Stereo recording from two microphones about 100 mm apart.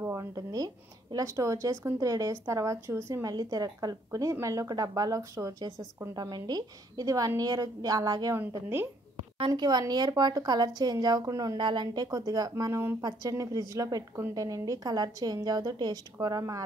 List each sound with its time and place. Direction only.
0.0 s speech: 30° right (ahead or behind)
8.4 s a woman's voice: 25° right (ahead or behind)
9.5 s a woman's voice: 40° right (ahead or behind)
11.5 s speech: 50° right (ahead or behind); by 16.6 s 35° right (ahead or behind)